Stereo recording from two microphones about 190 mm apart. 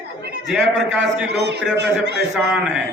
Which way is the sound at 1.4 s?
65° right (ahead or behind).